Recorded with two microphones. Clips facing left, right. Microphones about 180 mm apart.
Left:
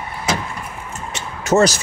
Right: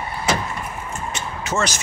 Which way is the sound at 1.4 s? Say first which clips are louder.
Left 10 dB; 40° left (ahead or behind).